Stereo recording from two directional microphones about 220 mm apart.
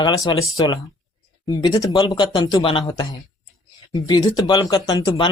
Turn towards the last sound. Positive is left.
turn(degrees=20)  # may be behind; listen again after turning